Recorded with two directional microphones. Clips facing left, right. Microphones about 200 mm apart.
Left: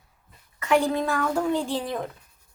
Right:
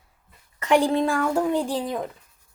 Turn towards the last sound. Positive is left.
turn(degrees=0)  # may be behind; listen again after turning